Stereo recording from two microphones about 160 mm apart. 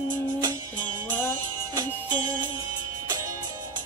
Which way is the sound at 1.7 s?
25° right (ahead or behind).